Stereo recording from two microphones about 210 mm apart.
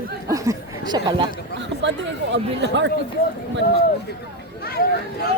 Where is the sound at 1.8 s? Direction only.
60° right (ahead or behind).